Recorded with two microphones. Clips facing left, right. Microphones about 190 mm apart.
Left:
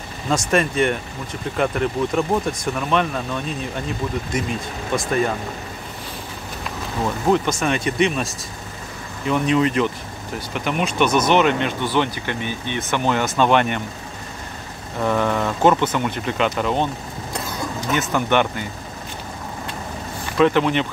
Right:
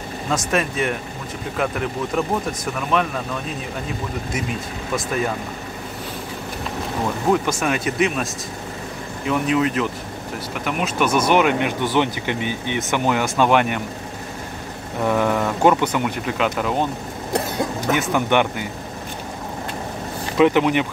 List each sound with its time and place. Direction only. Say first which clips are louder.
0.3 s speech: left 3 dB; 5° right (ahead or behind)
4.9 s speech: left 2 dB; 5° right (ahead or behind)
7.6 s speech: left 1 dB; 5° right (ahead or behind)
9.3 s speech: left 1 dB; 5° right (ahead or behind)
15.0 s speech: right 1 dB; 10° right (ahead or behind)
17.3 s vehicle: right 6 dB; 60° right (ahead or behind)
17.9 s speech: even; 15° right (ahead or behind)
20.3 s speech: right 1 dB; 15° right (ahead or behind)